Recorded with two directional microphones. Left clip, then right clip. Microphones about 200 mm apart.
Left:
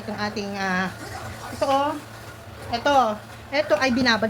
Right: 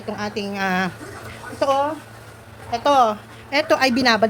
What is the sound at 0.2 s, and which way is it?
Speech, 50° right (ahead or behind).